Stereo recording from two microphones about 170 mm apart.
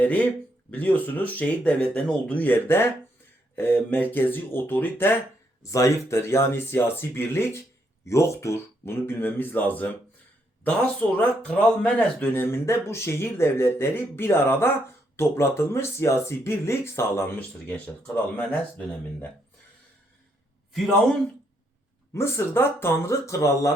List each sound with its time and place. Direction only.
0.7 s speech: 10° left (ahead or behind)
20.7 s speech: centre (ahead or behind)
22.1 s speech: 15° left (ahead or behind)